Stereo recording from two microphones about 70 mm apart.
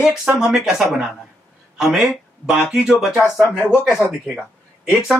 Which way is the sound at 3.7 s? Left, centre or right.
Centre.